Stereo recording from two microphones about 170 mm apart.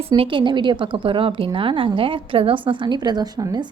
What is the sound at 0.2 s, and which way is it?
A woman's voice, 30° right (ahead or behind).